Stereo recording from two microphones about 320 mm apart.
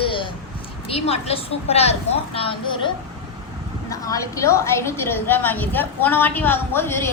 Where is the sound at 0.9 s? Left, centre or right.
Centre.